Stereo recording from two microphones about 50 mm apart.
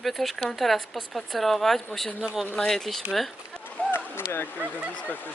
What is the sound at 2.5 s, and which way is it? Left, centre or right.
Speech, centre.